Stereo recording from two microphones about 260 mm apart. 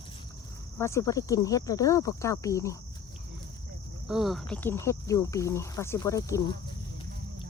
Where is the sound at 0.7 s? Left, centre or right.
Centre.